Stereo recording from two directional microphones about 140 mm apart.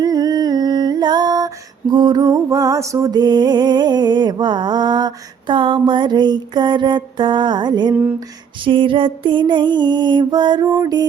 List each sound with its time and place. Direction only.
0.0 s music: 30° right (ahead or behind)